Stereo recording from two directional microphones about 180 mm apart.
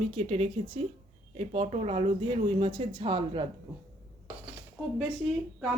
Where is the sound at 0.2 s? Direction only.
35° right (ahead or behind).